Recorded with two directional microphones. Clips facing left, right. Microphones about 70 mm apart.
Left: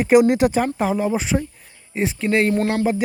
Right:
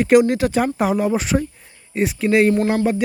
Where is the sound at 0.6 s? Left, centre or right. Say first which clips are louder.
Right 2 dB; centre.